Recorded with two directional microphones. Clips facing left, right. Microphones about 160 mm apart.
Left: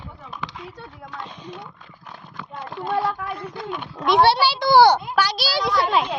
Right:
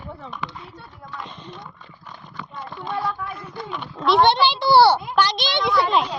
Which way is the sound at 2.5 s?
65° left (ahead or behind).